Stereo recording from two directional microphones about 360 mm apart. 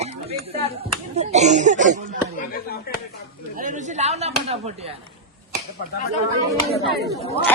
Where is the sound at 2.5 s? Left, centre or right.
Left.